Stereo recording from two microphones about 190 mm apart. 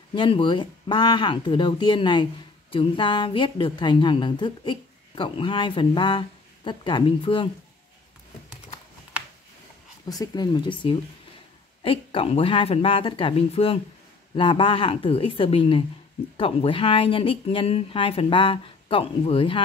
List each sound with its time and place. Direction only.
0.1 s a woman's voice: 25° left (ahead or behind)
10.0 s a woman's voice: 20° left (ahead or behind)